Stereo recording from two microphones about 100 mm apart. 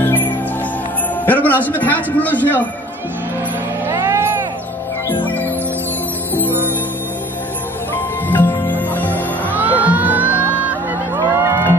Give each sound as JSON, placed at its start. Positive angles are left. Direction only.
{"t": 1.2, "sound": "a man's voice", "side_deg": 15}
{"t": 3.9, "sound": "vehicle", "side_deg": -25}
{"t": 5.2, "sound": "music", "side_deg": 20}
{"t": 7.9, "sound": "music", "side_deg": 20}
{"t": 9.5, "sound": "music", "side_deg": -20}